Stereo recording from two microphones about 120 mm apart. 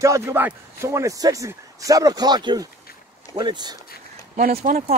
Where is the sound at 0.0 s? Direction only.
25° right (ahead or behind).